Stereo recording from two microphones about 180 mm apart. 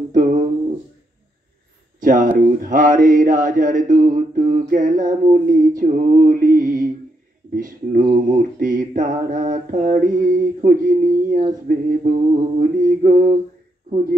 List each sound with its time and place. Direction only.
2.0 s mantra: 50° right (ahead or behind)